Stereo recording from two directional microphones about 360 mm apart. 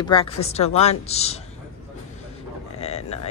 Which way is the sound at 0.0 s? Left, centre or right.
Centre.